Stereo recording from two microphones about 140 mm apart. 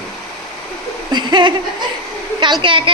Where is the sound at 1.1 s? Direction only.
35° right (ahead or behind).